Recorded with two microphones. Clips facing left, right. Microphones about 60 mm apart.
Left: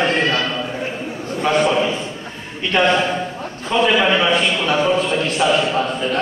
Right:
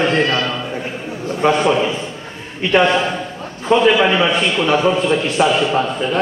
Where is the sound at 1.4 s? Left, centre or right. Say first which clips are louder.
Right 3 dB; right.